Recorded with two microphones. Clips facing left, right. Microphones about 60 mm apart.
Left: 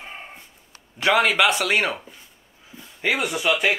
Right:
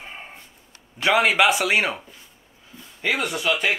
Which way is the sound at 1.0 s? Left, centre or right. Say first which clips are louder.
Even; centre.